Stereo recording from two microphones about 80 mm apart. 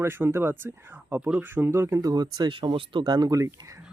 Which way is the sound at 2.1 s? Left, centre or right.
Right.